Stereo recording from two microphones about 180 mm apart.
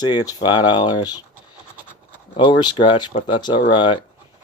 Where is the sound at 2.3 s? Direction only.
25° left (ahead or behind).